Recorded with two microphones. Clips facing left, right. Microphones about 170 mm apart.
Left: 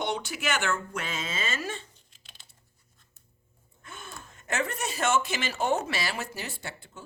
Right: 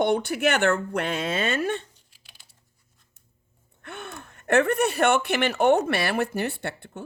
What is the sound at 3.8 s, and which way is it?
Speech, 65° right (ahead or behind).